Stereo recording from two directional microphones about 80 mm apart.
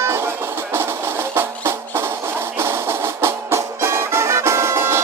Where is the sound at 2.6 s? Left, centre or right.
Right.